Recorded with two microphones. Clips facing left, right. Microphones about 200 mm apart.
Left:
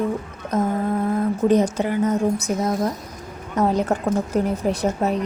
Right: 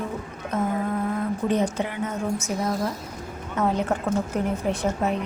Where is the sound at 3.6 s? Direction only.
35° left (ahead or behind).